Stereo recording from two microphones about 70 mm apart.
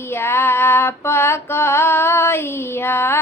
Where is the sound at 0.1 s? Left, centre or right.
Left.